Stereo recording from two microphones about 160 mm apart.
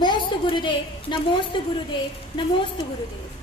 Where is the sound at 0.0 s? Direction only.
30° left (ahead or behind).